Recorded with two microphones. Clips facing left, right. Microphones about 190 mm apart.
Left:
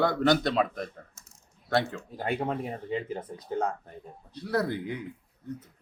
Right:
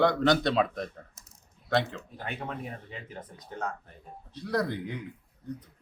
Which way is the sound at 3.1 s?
25° left (ahead or behind).